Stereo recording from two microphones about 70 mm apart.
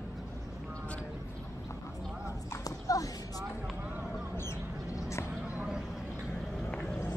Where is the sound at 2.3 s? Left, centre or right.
Left.